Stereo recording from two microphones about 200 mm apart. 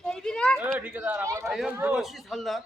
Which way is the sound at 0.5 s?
10° right (ahead or behind).